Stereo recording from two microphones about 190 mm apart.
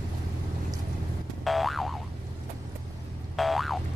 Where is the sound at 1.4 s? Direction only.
Centre (ahead or behind).